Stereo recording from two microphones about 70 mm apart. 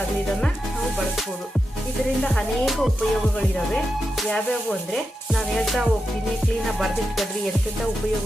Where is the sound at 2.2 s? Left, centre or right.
Centre.